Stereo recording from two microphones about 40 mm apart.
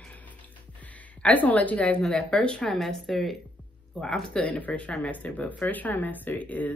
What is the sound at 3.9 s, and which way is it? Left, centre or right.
Speech, centre.